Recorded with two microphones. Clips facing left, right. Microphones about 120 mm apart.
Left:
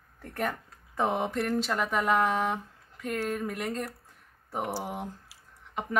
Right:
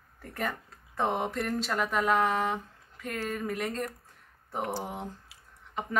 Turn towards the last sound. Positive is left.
turn(degrees=10)  # may be behind; listen again after turning